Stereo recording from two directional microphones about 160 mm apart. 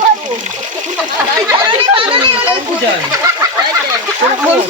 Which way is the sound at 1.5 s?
30° right (ahead or behind).